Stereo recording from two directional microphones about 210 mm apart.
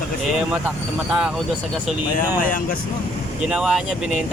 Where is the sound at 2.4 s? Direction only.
40° left (ahead or behind).